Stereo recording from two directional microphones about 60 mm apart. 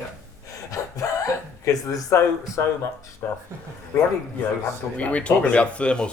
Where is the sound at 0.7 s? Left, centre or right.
Left.